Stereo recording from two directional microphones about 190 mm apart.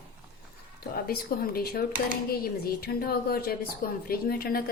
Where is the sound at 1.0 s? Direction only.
55° left (ahead or behind).